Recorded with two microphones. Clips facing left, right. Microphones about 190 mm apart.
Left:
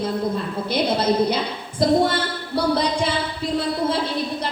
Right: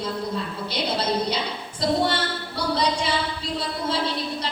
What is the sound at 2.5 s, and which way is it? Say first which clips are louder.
Speech: left 5 dB; 55° left (ahead or behind).